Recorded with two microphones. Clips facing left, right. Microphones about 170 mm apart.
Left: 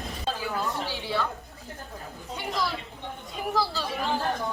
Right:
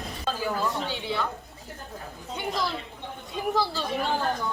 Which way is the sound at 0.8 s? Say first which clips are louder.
Even; 20° right (ahead or behind).